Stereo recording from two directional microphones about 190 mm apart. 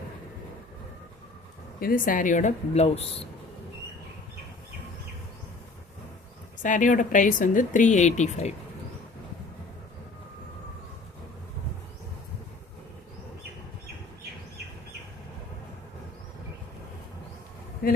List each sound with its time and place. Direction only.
1.8 s a woman's voice: 45° left (ahead or behind)
6.6 s speech: 40° left (ahead or behind)